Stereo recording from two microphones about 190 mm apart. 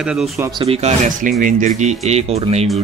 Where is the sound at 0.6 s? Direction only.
30° right (ahead or behind).